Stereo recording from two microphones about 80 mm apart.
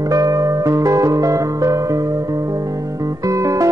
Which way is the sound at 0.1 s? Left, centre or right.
Right.